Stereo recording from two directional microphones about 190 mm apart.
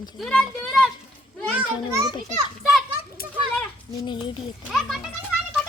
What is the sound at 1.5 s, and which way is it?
Speech, 15° right (ahead or behind).